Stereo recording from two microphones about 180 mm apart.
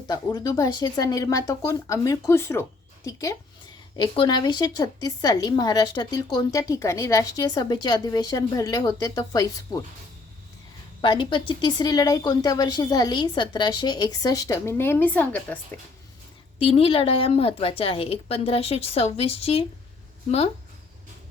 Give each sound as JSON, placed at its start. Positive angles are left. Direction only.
{"t": 0.1, "sound": "a woman's voice", "side_deg": 20}
{"t": 11.0, "sound": "a woman's voice", "side_deg": 25}
{"t": 16.6, "sound": "a woman's voice", "side_deg": 30}